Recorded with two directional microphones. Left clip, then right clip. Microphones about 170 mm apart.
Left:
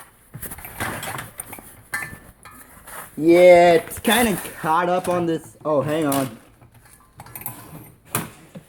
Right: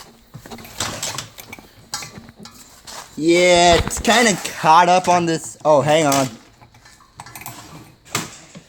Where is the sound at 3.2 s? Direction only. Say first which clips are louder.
Left 2 dB; 20° right (ahead or behind).